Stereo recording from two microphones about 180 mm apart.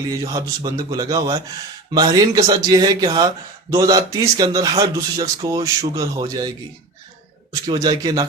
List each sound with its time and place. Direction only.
0.3 s speech: 20° right (ahead or behind)
7.5 s speech: 20° right (ahead or behind)